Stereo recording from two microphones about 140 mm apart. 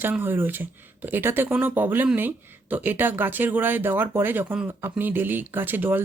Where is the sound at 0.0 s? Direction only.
15° right (ahead or behind).